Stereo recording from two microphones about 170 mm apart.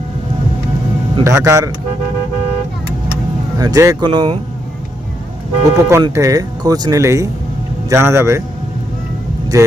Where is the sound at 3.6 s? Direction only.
20° right (ahead or behind).